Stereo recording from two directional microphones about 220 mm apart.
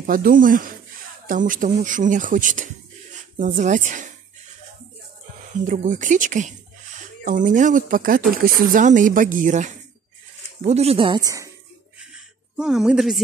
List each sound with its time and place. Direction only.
0.0 s speech: 40° right (ahead or behind)
5.6 s speech: 35° right (ahead or behind); by 11.5 s 15° right (ahead or behind)
12.1 s a sound: centre (ahead or behind)